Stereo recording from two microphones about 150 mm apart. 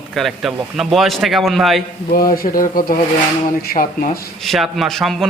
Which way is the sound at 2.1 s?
75° left (ahead or behind).